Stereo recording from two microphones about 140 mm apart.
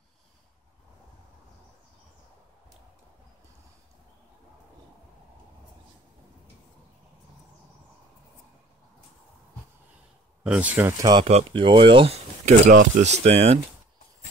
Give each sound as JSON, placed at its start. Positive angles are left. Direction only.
{"t": 10.4, "sound": "speech", "side_deg": -10}
{"t": 11.0, "sound": "speech", "side_deg": -30}
{"t": 11.2, "sound": "speech", "side_deg": -50}
{"t": 11.6, "sound": "speech", "side_deg": -35}
{"t": 12.6, "sound": "speech", "side_deg": -60}